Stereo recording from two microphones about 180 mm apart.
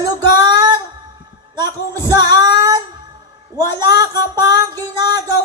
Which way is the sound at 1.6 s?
20° right (ahead or behind).